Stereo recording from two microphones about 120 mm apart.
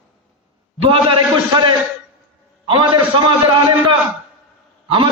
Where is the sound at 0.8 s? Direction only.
50° right (ahead or behind).